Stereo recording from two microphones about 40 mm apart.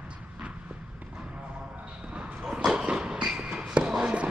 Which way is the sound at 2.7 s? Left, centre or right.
Right.